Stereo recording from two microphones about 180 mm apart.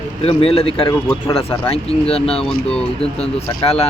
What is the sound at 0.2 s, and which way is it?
Speech, 35° left (ahead or behind).